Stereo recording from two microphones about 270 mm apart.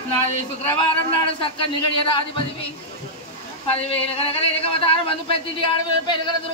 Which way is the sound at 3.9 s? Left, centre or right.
Left.